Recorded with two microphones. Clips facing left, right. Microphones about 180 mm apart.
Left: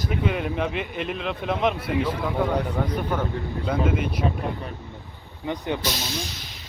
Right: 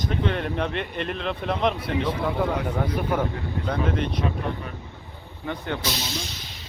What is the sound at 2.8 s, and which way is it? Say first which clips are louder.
Speech: right 1 dB; 10° right (ahead or behind).